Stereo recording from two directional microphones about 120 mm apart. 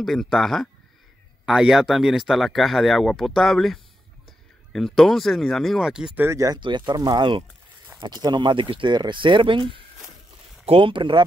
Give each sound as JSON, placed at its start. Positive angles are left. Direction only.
{"t": 0.0, "sound": "speech", "side_deg": 0}
{"t": 6.2, "sound": "speech", "side_deg": -25}
{"t": 6.6, "sound": "speech", "side_deg": -40}